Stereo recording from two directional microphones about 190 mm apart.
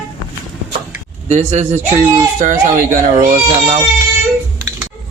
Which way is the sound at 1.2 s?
40° right (ahead or behind).